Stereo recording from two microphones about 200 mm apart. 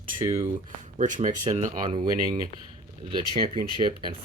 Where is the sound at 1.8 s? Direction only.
20° right (ahead or behind).